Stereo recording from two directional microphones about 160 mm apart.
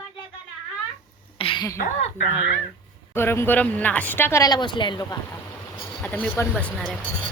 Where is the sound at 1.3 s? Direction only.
35° left (ahead or behind).